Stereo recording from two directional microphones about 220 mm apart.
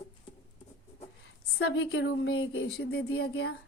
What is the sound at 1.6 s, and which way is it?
A woman's voice, 65° left (ahead or behind).